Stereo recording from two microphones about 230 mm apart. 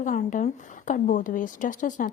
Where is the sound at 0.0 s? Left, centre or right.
Left.